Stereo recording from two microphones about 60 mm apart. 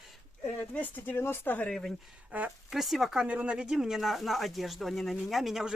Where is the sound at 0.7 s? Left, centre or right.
Left.